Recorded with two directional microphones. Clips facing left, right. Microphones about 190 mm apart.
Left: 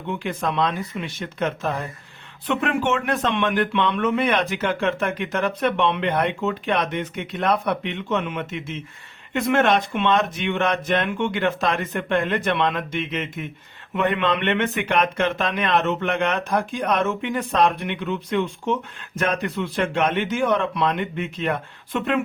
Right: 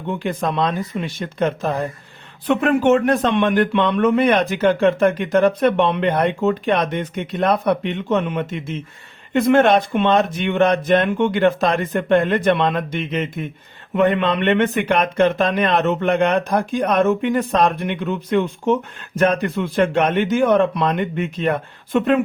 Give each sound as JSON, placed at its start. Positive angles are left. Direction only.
{"t": 0.1, "sound": "a man's voice", "side_deg": -35}